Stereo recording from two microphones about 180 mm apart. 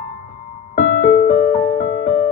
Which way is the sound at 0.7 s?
45° left (ahead or behind).